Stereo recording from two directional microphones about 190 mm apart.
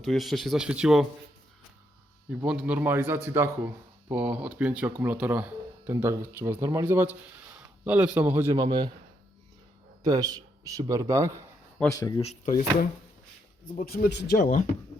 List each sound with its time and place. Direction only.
0.0 s speech: centre (ahead or behind)
2.3 s speech: 5° right (ahead or behind)
8.5 s a man's voice: 25° right (ahead or behind)
10.0 s speech: 20° right (ahead or behind)
11.9 s speech: 20° left (ahead or behind)
13.8 s speech: 50° left (ahead or behind)
14.3 s speech: 45° left (ahead or behind)